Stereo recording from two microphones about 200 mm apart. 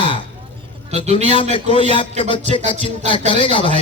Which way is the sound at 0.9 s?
35° right (ahead or behind).